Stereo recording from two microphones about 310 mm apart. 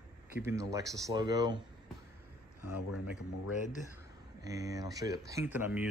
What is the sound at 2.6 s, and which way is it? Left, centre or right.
Speech, left.